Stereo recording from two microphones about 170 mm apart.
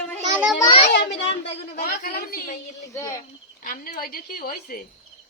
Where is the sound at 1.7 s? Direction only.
60° left (ahead or behind).